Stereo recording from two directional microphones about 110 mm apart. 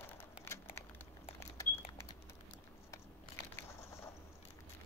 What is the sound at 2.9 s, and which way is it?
Crushing, 25° left (ahead or behind).